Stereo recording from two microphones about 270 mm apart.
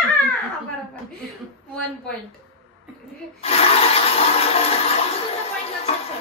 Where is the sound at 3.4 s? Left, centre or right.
Left.